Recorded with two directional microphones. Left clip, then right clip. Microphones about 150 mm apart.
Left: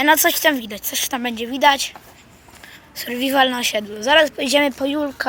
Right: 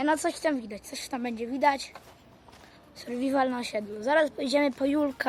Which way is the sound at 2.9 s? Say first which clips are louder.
Left 9 dB; 5° right (ahead or behind).